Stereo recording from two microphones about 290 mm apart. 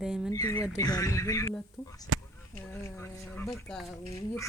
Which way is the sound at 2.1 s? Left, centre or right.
Right.